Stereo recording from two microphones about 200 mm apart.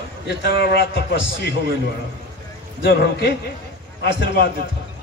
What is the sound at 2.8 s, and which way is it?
A man's voice, 55° left (ahead or behind).